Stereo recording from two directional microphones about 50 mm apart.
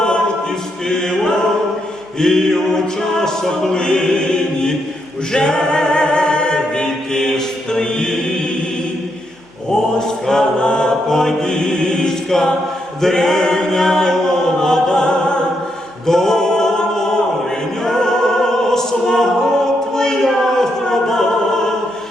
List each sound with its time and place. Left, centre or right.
0.9 s choir: centre
2.1 s a capella: centre
5.3 s a capella: centre
10.0 s chant: centre
16.0 s mantra: centre
17.8 s music: centre
19.9 s choir: centre